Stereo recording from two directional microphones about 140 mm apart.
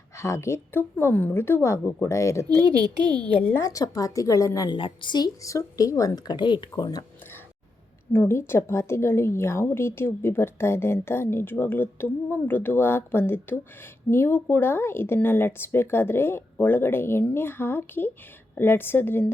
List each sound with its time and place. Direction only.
0.2 s a woman's voice: 20° left (ahead or behind)
8.1 s speech: 15° left (ahead or behind)